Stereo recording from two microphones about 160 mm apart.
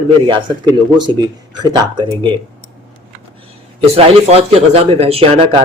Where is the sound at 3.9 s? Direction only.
40° right (ahead or behind).